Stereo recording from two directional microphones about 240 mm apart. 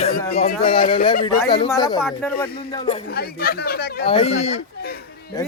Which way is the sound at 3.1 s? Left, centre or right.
Left.